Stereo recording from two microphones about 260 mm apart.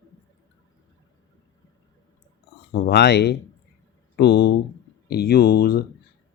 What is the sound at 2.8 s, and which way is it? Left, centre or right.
Speech, left.